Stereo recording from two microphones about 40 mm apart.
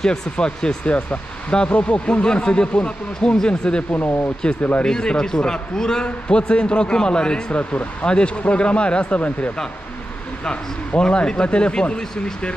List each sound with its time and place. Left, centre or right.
0.0 s a man's voice: centre
3.9 s speech: left
4.8 s a man's voice: centre
7.5 s a man's voice: left
10.9 s a man's voice: left